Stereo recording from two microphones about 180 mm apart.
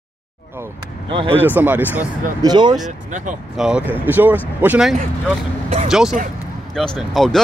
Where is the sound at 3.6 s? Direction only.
Centre (ahead or behind).